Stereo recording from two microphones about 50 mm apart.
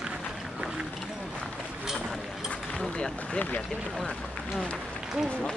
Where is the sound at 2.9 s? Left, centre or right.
Centre.